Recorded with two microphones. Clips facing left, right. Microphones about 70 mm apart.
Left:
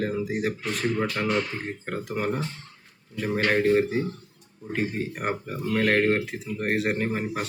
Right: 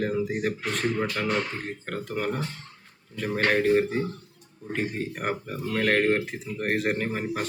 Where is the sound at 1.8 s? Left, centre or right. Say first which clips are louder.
Left 1 dB; centre.